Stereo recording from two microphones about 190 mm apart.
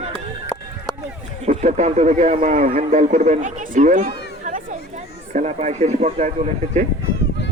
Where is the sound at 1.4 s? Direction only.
35° right (ahead or behind).